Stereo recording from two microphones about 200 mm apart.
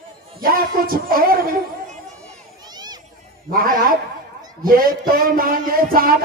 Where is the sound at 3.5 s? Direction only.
45° right (ahead or behind).